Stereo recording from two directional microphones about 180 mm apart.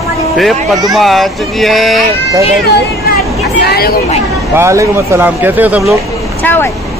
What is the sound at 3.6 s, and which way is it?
Speech, 60° left (ahead or behind).